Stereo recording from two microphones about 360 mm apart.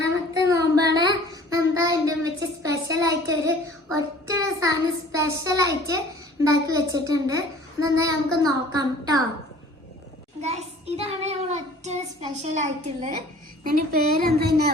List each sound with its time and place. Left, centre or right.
0.4 s child singing: centre
3.9 s a child's voice: centre
10.4 s a child's voice: centre